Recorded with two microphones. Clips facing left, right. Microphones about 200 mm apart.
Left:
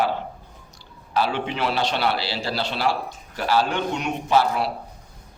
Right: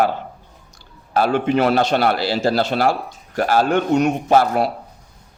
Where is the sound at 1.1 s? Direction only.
50° right (ahead or behind).